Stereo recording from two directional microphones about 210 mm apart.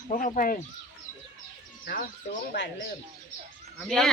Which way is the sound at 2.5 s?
55° left (ahead or behind).